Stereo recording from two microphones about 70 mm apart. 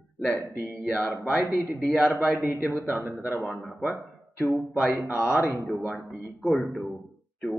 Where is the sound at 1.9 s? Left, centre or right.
Right.